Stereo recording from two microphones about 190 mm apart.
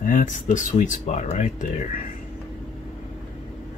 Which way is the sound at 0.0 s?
45° left (ahead or behind).